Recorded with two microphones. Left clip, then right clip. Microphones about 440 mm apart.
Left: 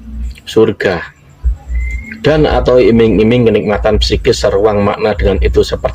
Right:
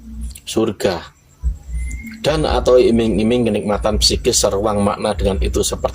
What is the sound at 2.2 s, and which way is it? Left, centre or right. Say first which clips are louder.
A man's voice: left 6 dB; right.